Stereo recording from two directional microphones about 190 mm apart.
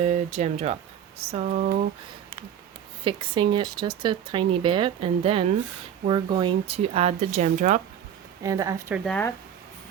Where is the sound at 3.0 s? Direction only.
25° right (ahead or behind).